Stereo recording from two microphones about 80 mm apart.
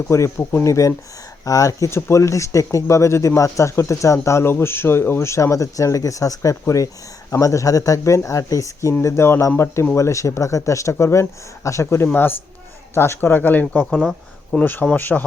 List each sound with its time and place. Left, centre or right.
0.1 s speech: left
13.9 s speech: centre
14.6 s speech: left